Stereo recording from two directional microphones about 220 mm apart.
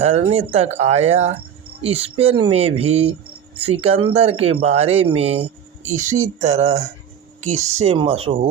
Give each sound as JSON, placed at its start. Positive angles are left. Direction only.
{"t": 0.0, "sound": "speech", "side_deg": -30}